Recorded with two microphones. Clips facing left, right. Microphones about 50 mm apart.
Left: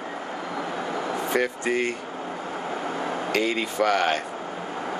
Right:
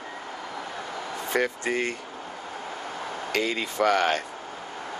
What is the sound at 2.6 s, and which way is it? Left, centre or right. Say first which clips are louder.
Air conditioning: left 7 dB; centre.